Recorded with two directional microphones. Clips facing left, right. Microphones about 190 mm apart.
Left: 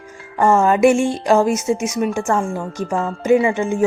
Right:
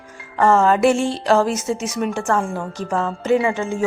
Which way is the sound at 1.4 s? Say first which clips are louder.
Left 4 dB; 50° left (ahead or behind).